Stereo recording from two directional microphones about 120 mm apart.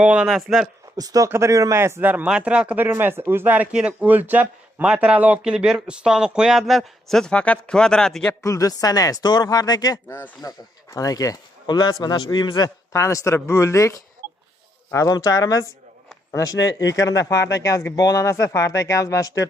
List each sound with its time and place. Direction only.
0.0 s speech: 10° right (ahead or behind)
0.9 s speech: 30° right (ahead or behind); by 8.4 s 5° left (ahead or behind)
8.4 s speech: 30° left (ahead or behind)
10.1 s speech: 15° left (ahead or behind)
10.9 s speech: 30° left (ahead or behind)